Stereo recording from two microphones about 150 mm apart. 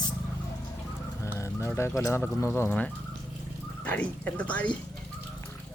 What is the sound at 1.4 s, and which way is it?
Speech, 20° left (ahead or behind).